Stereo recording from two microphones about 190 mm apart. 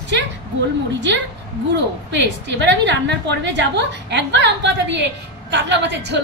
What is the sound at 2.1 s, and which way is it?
A woman's voice, 70° right (ahead or behind).